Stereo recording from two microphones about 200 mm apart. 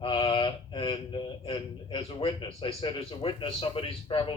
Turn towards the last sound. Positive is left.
turn(degrees=25)  # may be behind; listen again after turning